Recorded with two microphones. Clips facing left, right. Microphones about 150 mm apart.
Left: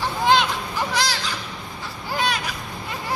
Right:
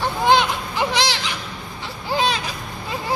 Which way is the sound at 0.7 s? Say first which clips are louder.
Right 4 dB; 20° right (ahead or behind).